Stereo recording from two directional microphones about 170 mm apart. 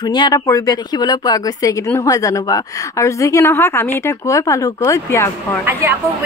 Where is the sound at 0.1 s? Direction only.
25° left (ahead or behind).